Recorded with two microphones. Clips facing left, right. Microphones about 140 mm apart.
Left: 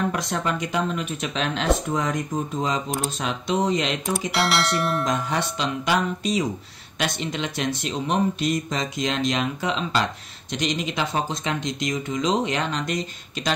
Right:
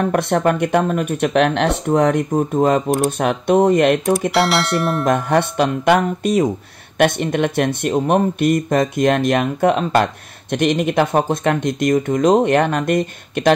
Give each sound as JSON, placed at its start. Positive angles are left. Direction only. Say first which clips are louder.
{"t": 0.1, "sound": "speech", "louder": "right 10 dB", "side_deg": -55}
{"t": 4.3, "sound": "speech", "louder": "right 6 dB", "side_deg": 0}
{"t": 5.0, "sound": "speech", "louder": "right 8 dB", "side_deg": -55}